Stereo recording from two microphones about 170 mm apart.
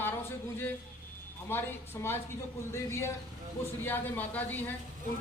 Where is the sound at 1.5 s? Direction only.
15° left (ahead or behind).